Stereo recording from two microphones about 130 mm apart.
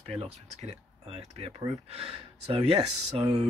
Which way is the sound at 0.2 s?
55° right (ahead or behind).